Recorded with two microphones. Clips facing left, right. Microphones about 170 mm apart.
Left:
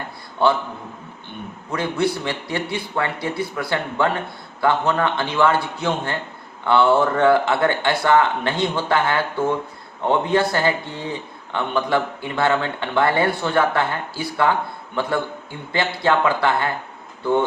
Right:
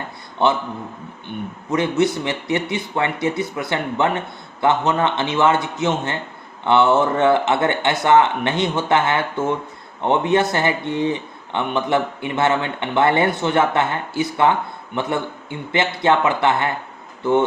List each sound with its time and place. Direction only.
0.4 s speech: 20° right (ahead or behind)
1.7 s speech: 20° right (ahead or behind)